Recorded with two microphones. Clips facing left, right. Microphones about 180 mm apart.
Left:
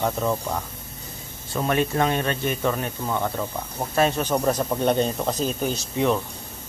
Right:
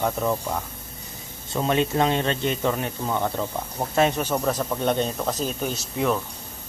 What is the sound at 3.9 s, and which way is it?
Speech, 20° right (ahead or behind).